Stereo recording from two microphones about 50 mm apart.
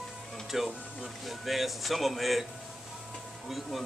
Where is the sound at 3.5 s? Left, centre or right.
Centre.